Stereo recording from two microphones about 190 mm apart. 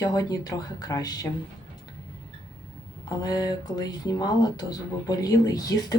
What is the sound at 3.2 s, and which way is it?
Speech, 20° left (ahead or behind).